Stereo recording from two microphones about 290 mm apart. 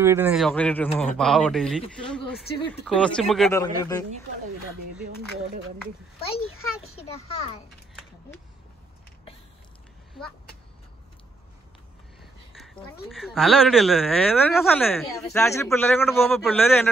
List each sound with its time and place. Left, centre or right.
0.0 s speech: centre
3.6 s speech: centre
6.5 s a child's voice: left
12.2 s a sound: centre
13.1 s speech: centre